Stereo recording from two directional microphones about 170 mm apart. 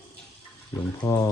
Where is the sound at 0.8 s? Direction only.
10° left (ahead or behind).